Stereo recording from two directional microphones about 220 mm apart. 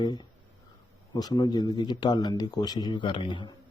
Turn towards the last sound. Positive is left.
turn(degrees=20)  # may be behind; listen again after turning